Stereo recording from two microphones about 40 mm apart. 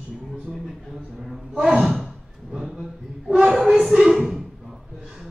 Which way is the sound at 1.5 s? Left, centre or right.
Right.